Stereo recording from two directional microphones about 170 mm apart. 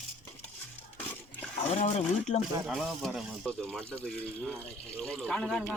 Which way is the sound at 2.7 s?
Centre (ahead or behind).